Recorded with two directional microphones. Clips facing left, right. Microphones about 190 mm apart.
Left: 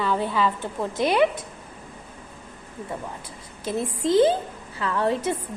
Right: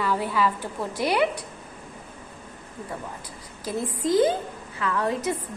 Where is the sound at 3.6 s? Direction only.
25° left (ahead or behind).